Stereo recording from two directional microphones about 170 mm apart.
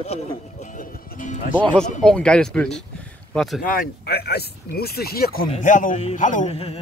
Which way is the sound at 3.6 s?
55° left (ahead or behind).